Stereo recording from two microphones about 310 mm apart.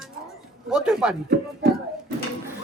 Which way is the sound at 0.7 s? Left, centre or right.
Centre.